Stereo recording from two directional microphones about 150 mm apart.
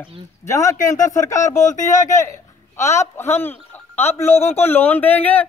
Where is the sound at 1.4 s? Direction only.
50° left (ahead or behind).